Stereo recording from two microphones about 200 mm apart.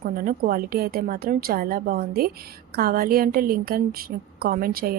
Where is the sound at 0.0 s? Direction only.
45° right (ahead or behind).